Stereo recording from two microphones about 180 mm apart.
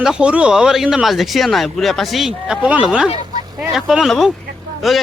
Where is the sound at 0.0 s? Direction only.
5° right (ahead or behind).